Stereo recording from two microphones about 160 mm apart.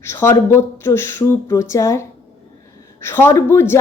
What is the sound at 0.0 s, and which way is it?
A woman's voice, 15° left (ahead or behind).